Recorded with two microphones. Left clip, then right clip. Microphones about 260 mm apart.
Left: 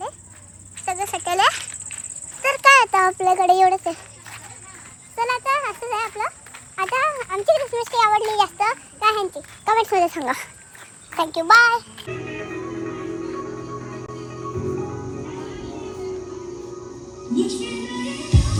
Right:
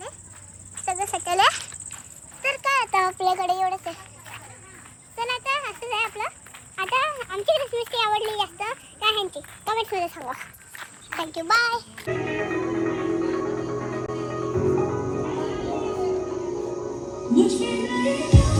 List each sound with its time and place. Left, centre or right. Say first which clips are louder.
0.9 s snake: left 2 dB; centre
2.4 s a sound: left 9 dB; centre
3.1 s a child's voice: left 4 dB; left
3.3 s speech: left 8 dB; centre
5.1 s speech: left 5 dB; centre
11.2 s music: left 8 dB; centre